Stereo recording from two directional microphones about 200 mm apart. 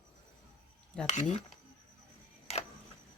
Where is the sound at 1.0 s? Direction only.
35° left (ahead or behind).